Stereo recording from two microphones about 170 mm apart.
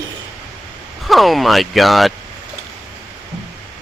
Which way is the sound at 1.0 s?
Centre (ahead or behind).